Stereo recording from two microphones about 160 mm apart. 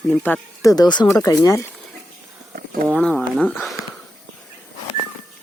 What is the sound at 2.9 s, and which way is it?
Speech, 5° left (ahead or behind).